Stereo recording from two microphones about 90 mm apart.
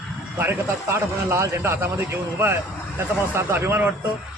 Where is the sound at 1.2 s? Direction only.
35° right (ahead or behind).